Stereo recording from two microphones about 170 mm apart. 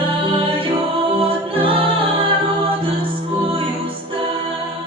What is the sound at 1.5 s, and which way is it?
A capella, 30° right (ahead or behind).